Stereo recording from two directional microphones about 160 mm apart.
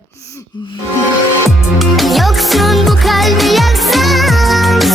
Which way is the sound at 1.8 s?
Centre (ahead or behind).